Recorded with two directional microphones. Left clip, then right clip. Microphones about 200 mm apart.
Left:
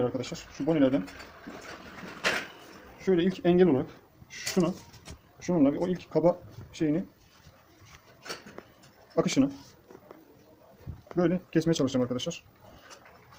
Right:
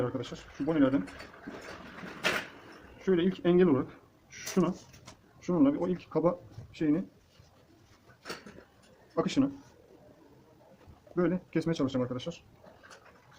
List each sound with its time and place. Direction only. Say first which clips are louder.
0.0 s speech: left 4 dB; 30° left (ahead or behind)
3.0 s speech: left 2 dB; 25° left (ahead or behind)
4.3 s speech: left 2 dB; 15° left (ahead or behind)
5.4 s speech: left 2 dB; 30° left (ahead or behind)
9.1 s speech: left 3 dB; 40° left (ahead or behind)
11.2 s speech: left 3 dB; 40° left (ahead or behind)